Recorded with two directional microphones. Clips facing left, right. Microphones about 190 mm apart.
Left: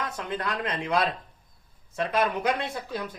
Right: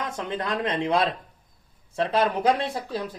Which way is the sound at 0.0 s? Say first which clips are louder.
Right 2 dB; 25° right (ahead or behind).